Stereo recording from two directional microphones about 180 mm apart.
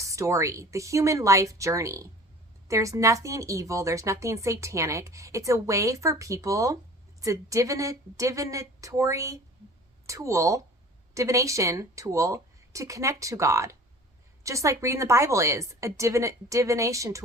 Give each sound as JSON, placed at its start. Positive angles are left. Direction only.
{"t": 0.0, "sound": "speech", "side_deg": -15}